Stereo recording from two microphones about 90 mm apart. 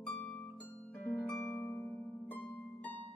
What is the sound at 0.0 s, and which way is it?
Harp, 15° left (ahead or behind).